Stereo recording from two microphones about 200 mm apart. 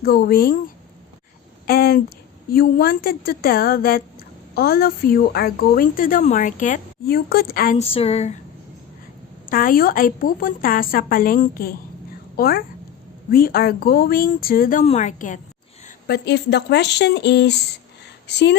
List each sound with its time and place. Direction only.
0.0 s a woman's voice: 50° left (ahead or behind)
1.6 s a woman's voice: 50° left (ahead or behind)
7.8 s speech: 30° left (ahead or behind)
9.5 s a woman's voice: 45° left (ahead or behind)
16.0 s speech: 55° left (ahead or behind)